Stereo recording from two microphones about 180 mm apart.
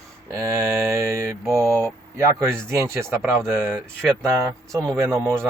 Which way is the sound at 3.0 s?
Centre (ahead or behind).